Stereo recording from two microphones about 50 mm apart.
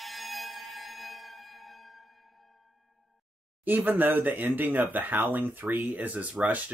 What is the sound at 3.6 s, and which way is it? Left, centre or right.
Speech, right.